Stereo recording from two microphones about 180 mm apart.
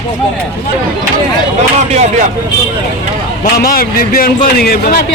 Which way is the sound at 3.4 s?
55° left (ahead or behind).